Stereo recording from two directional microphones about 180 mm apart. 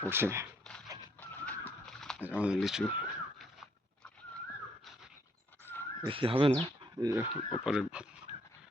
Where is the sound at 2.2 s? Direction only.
5° right (ahead or behind).